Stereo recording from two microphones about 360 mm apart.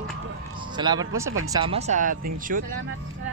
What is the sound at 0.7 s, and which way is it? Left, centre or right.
Speech, centre.